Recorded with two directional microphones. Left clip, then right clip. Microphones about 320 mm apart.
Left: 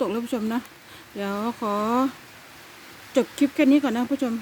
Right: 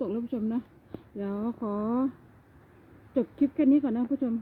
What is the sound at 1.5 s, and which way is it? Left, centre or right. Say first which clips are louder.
Speech: left 10 dB; centre.